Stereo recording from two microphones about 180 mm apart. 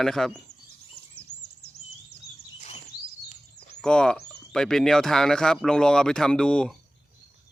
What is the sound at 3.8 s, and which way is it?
Speech, 5° left (ahead or behind).